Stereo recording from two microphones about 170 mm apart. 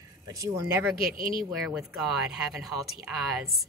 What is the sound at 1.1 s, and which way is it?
Speech, 55° right (ahead or behind).